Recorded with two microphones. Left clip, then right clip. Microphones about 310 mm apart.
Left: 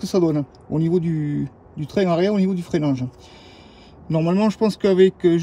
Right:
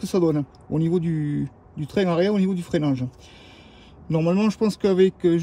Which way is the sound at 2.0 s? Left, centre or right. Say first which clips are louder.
Left 2 dB; centre.